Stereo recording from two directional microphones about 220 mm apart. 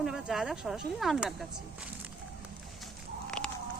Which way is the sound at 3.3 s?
5° left (ahead or behind).